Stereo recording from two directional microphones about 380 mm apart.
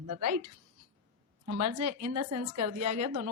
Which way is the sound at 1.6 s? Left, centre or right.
Right.